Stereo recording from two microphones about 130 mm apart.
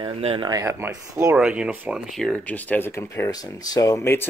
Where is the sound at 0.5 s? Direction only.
25° right (ahead or behind).